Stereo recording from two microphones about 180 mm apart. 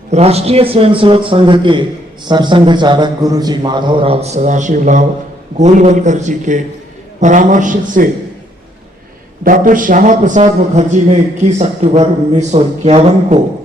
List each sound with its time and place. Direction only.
0.1 s a man's voice: 35° right (ahead or behind)
9.4 s a man's voice: 50° right (ahead or behind)